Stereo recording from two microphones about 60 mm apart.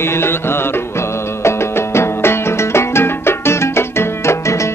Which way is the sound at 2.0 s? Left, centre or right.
Left.